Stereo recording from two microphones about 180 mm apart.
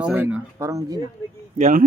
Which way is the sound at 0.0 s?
10° right (ahead or behind).